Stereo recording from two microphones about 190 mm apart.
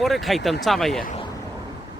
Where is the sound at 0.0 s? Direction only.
Centre (ahead or behind).